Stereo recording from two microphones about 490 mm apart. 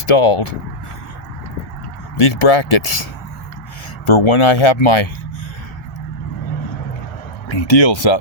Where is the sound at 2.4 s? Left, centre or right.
Left.